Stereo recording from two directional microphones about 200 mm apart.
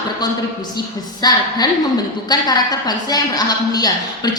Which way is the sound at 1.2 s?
20° left (ahead or behind).